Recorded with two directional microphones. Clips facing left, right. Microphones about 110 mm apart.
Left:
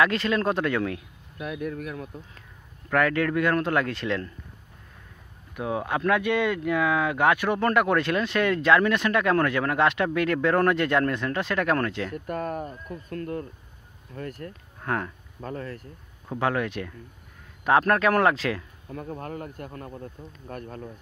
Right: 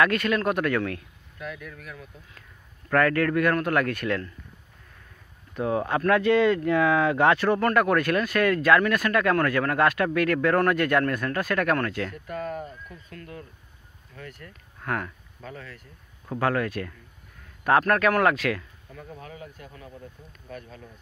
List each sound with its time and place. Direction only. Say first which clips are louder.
0.0 s speech: even; 25° left (ahead or behind)
1.6 s speech: left 10 dB; 50° left (ahead or behind)
2.9 s speech: right 1 dB; 15° left (ahead or behind)
5.5 s speech: right 2 dB; 5° left (ahead or behind); by 12.1 s 25° left (ahead or behind)
12.3 s speech: left 2 dB; 45° left (ahead or behind)
14.8 s speech: left 1 dB; 25° left (ahead or behind)
15.4 s speech: left 6 dB; 45° left (ahead or behind)
16.3 s speech: right 1 dB; 20° left (ahead or behind)
18.9 s speech: left 8 dB; 45° left (ahead or behind)